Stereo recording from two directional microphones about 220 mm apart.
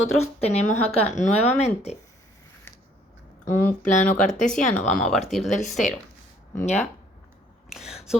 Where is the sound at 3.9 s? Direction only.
35° left (ahead or behind).